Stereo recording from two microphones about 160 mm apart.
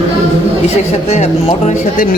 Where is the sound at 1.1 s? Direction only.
45° left (ahead or behind).